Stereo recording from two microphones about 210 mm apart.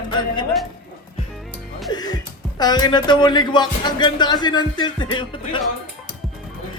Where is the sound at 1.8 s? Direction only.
20° left (ahead or behind).